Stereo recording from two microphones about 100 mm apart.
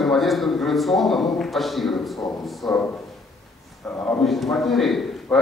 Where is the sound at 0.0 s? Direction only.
Centre (ahead or behind).